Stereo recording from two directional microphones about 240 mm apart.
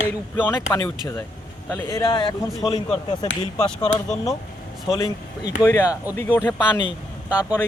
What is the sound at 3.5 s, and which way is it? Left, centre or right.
Speech, centre.